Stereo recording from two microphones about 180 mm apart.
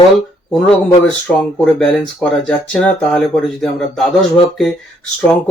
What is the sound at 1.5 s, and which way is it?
Speech, 5° left (ahead or behind).